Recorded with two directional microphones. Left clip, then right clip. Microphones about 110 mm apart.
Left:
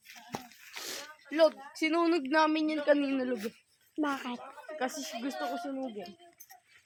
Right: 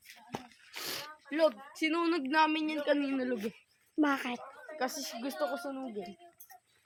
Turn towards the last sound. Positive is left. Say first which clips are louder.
# even
turn(degrees=-40)  # may be behind; listen again after turning